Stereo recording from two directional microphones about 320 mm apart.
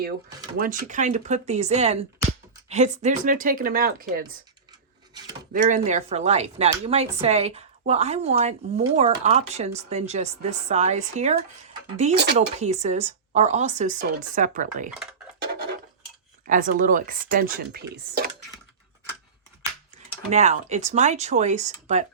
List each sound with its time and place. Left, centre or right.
0.5 s speech: right
5.5 s speech: right
16.5 s speech: right
20.3 s speech: right